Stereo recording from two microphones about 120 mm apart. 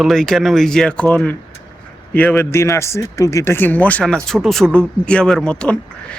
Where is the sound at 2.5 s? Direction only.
25° left (ahead or behind).